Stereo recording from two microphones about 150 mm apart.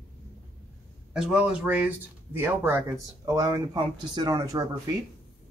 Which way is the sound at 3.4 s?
25° right (ahead or behind).